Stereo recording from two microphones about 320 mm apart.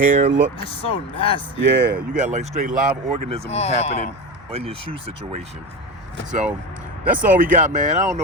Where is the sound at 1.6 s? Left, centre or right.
Right.